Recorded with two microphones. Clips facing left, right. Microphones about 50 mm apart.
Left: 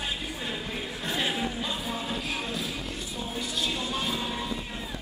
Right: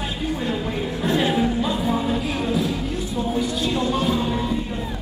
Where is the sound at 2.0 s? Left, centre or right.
Centre.